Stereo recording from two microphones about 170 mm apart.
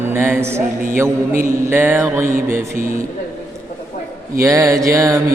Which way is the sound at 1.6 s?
10° right (ahead or behind).